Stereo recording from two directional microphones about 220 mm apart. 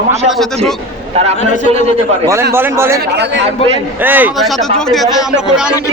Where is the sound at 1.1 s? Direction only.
30° right (ahead or behind).